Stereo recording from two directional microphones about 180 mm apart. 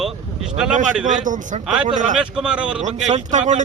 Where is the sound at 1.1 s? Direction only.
45° right (ahead or behind).